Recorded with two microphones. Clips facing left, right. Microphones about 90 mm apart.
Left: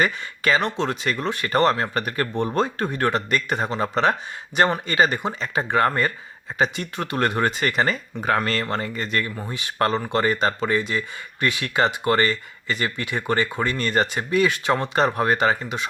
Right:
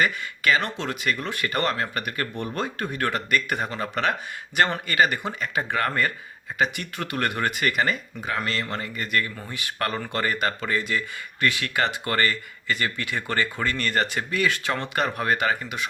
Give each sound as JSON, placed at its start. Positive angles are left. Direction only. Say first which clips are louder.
{"t": 0.0, "sound": "speech", "louder": "left 1 dB", "side_deg": 30}
{"t": 8.2, "sound": "speech", "louder": "left 8 dB", "side_deg": 45}